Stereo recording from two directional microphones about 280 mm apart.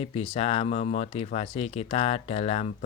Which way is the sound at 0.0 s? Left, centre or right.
Left.